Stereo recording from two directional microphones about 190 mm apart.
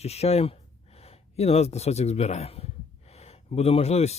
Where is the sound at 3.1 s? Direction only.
35° left (ahead or behind).